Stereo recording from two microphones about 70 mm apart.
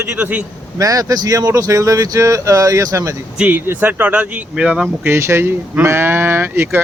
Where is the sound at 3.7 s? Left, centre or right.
Right.